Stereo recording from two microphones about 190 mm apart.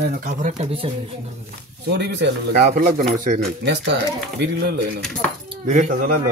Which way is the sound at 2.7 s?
45° right (ahead or behind).